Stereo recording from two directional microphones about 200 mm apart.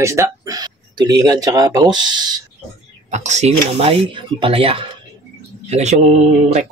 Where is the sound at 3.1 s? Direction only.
35° right (ahead or behind).